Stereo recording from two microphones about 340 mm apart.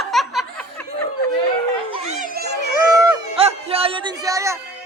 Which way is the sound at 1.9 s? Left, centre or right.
Right.